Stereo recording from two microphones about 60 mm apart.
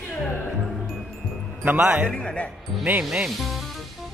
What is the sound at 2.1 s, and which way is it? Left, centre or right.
Speech, centre.